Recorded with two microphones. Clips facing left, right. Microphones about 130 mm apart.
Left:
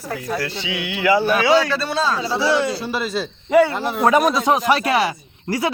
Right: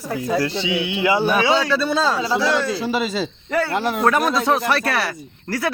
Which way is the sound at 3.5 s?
15° left (ahead or behind).